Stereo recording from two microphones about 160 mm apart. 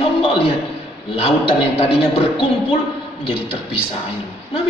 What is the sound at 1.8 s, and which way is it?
Speech, 40° left (ahead or behind).